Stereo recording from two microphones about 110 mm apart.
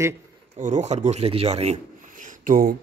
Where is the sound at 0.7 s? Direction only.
90° right.